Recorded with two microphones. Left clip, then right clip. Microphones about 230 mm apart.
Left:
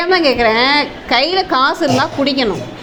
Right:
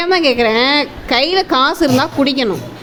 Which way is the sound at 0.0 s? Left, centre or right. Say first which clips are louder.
Left 1 dB; right.